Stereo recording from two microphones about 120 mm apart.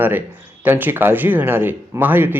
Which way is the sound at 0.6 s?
15° right (ahead or behind).